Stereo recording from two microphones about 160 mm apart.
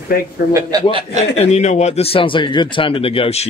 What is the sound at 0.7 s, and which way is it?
Speech, 20° right (ahead or behind).